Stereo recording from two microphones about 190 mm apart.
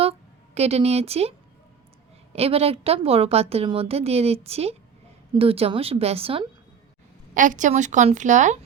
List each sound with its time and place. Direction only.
0.0 s a sound: 30° right (ahead or behind)
2.3 s a woman's voice: 30° right (ahead or behind)
7.3 s a woman's voice: 40° right (ahead or behind)